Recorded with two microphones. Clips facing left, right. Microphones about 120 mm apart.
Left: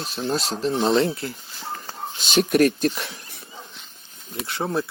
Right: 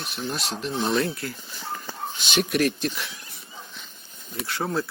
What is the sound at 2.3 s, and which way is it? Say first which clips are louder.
Speech: left 5 dB; 45° left (ahead or behind).